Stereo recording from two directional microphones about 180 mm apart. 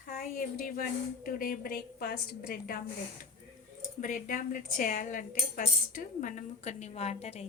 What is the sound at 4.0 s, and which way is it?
Speech, 50° left (ahead or behind).